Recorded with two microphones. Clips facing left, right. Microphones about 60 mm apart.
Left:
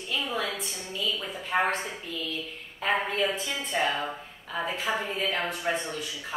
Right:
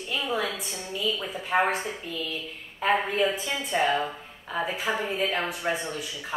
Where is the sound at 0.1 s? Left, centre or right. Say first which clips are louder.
Right 2 dB; centre.